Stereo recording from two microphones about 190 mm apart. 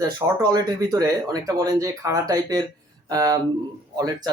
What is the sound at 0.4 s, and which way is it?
Speech, 20° right (ahead or behind).